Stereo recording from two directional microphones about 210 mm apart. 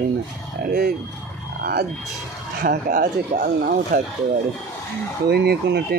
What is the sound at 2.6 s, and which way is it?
Speech, 45° right (ahead or behind).